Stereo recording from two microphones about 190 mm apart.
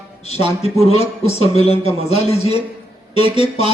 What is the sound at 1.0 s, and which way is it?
Speech, 35° left (ahead or behind).